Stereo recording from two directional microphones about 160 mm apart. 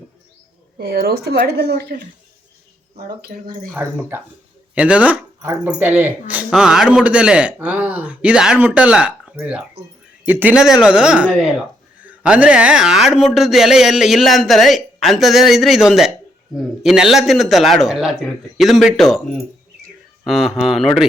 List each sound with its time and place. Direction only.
0.8 s a woman's voice: 75° right (ahead or behind)
3.2 s speech: 70° right (ahead or behind)
3.8 s speech: 10° right (ahead or behind)
20.2 s speech: centre (ahead or behind)